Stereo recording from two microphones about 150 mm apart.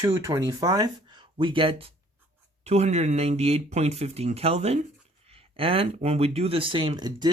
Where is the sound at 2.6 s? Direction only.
45° right (ahead or behind).